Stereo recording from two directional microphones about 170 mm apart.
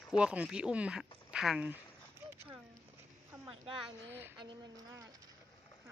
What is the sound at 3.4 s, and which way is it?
Speech, 30° right (ahead or behind).